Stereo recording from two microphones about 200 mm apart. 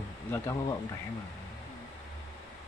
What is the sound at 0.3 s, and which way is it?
Speech, 15° left (ahead or behind).